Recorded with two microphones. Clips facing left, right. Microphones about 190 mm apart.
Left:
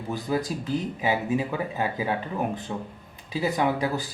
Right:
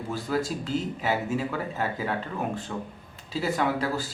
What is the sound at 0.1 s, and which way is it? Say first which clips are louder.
Speech: left 1 dB; 15° left (ahead or behind).